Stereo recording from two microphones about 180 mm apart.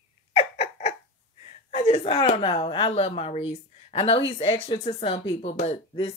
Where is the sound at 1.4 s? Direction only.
35° left (ahead or behind).